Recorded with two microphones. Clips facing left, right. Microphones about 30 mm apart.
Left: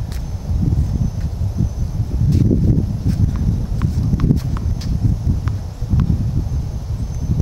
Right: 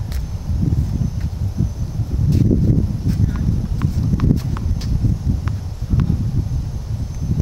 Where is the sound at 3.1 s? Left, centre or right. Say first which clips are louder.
Even; centre.